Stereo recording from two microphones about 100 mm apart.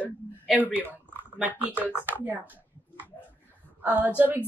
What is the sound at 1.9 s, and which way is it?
Speech, 20° left (ahead or behind).